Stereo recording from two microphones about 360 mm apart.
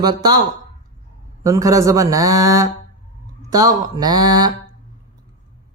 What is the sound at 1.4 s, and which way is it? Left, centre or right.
Speech, centre.